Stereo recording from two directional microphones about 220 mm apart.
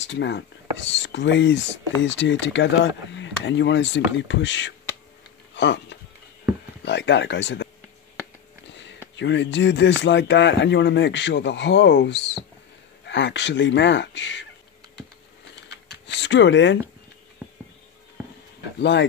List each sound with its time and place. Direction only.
0.0 s speech: 55° left (ahead or behind)
9.1 s speech: 55° left (ahead or behind)
15.9 s a sound: 55° left (ahead or behind)
18.8 s speech: 55° left (ahead or behind)